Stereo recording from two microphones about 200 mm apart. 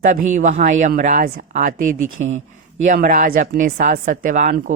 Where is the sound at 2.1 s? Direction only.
80° right.